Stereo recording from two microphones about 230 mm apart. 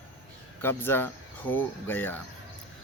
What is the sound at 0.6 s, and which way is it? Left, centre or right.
Speech, centre.